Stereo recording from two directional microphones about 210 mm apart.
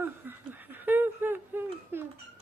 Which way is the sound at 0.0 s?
10° right (ahead or behind).